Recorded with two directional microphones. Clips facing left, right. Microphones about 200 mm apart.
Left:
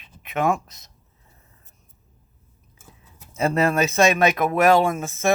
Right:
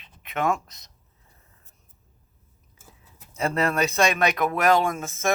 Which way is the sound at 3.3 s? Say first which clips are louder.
Left 4 dB; 25° left (ahead or behind).